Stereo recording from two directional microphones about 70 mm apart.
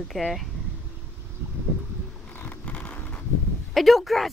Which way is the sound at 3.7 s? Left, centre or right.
Centre.